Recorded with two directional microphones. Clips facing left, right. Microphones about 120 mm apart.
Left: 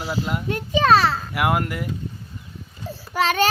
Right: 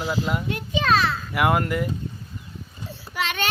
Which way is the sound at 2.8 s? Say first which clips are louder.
Left 7 dB; 40° left (ahead or behind).